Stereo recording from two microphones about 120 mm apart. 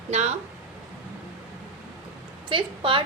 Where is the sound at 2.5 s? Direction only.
45° right (ahead or behind).